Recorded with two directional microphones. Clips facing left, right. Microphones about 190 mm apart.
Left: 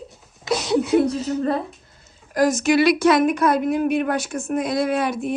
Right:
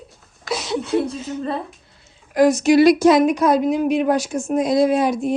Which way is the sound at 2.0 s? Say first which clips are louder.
Right 4 dB; 45° left (ahead or behind).